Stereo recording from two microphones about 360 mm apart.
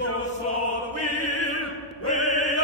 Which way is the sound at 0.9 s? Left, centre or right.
Left.